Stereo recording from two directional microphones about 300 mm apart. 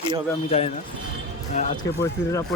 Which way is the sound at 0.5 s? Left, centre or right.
Left.